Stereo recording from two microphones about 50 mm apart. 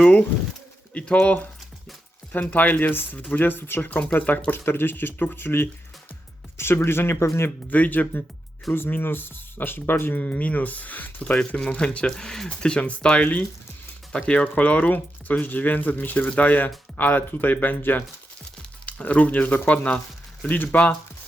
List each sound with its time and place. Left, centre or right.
0.0 s speech: left
4.5 s speech: left
7.2 s speech: left
7.7 s speech: left
10.2 s speech: left; by 12.5 s centre
12.5 s speech: left
18.9 s speech: left